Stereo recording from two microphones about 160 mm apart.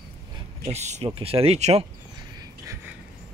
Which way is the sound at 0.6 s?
45° right (ahead or behind).